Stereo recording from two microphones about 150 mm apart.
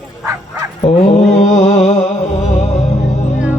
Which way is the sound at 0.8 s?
45° left (ahead or behind).